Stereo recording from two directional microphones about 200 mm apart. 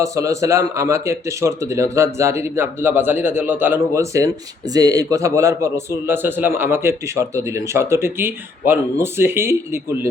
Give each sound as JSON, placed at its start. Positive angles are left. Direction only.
{"t": 0.0, "sound": "speech", "side_deg": -15}